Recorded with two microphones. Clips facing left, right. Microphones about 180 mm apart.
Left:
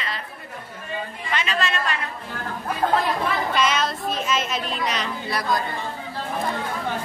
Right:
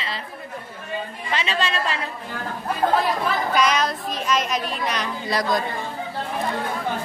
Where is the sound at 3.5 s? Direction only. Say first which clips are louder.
Right 3 dB; centre (ahead or behind).